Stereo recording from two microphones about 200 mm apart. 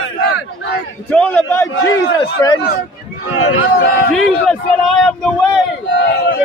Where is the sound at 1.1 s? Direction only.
10° left (ahead or behind).